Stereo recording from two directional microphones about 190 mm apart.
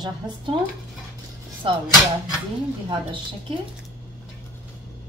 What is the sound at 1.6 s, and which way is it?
Speech, 30° right (ahead or behind).